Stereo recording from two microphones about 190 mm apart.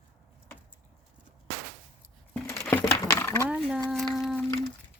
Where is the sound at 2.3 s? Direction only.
15° left (ahead or behind).